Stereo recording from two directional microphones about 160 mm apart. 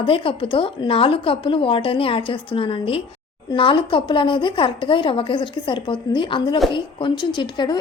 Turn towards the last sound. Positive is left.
turn(degrees=30)  # may be behind; listen again after turning